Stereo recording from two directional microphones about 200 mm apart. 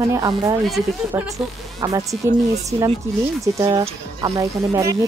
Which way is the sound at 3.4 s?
15° right (ahead or behind).